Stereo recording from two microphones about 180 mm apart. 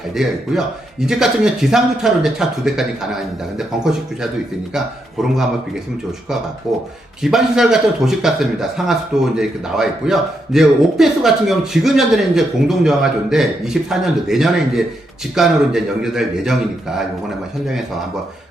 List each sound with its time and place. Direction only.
0.1 s a man's voice: 5° right (ahead or behind)
4.7 s a man's voice: centre (ahead or behind)
6.7 s a man's voice: centre (ahead or behind)